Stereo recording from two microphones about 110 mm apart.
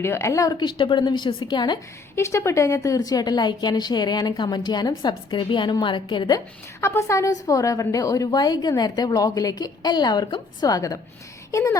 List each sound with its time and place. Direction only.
0.0 s a woman's voice: 25° left (ahead or behind); by 1.8 s 45° left (ahead or behind)
2.1 s a woman's voice: 25° left (ahead or behind); by 6.4 s 45° left (ahead or behind)
6.8 s a woman's voice: 25° left (ahead or behind)